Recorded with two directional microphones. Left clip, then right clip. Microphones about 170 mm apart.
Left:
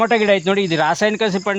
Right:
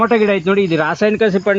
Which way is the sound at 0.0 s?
55° left (ahead or behind).